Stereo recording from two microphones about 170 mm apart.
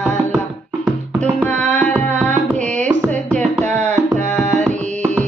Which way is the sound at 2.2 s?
45° right (ahead or behind).